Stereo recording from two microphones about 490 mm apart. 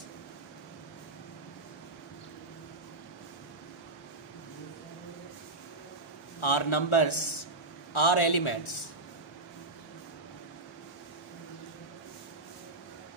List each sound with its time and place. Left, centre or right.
6.4 s a man's voice: left